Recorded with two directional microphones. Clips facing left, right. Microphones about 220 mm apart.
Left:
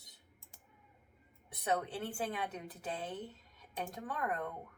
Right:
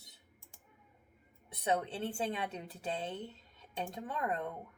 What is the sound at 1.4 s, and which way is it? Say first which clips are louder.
A woman's voice: right 2 dB; 25° right (ahead or behind).